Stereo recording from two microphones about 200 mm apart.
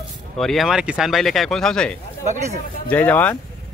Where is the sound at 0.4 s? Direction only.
Centre (ahead or behind).